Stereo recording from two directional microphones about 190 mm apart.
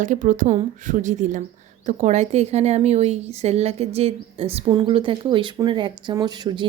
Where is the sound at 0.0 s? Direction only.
40° right (ahead or behind).